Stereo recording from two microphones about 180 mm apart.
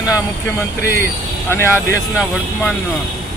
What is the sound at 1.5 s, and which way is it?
Speech, 15° left (ahead or behind).